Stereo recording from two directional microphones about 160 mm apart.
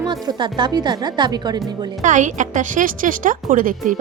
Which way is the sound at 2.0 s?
50° right (ahead or behind).